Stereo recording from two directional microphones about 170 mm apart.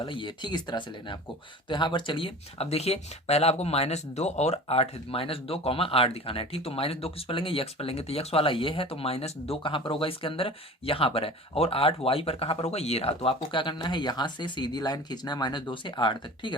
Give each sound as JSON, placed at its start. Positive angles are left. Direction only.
{"t": 0.0, "sound": "speech", "side_deg": 30}